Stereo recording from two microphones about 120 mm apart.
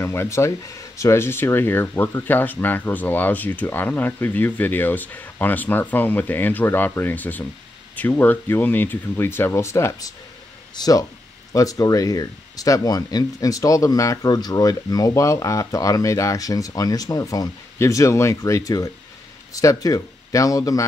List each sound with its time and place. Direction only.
0.0 s speech: 20° left (ahead or behind)